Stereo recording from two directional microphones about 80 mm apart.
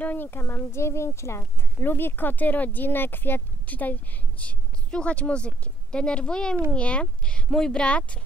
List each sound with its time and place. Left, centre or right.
0.0 s speech: left